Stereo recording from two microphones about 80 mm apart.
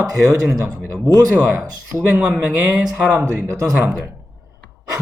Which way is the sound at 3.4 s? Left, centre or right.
Right.